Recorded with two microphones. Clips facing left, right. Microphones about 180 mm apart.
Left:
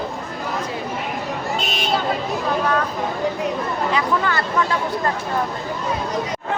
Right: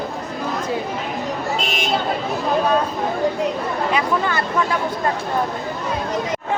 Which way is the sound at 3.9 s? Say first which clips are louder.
Even; 20° right (ahead or behind).